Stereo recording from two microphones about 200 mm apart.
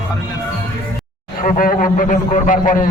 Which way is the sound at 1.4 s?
45° left (ahead or behind).